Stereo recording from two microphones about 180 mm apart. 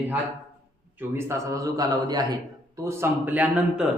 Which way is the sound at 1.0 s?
15° right (ahead or behind).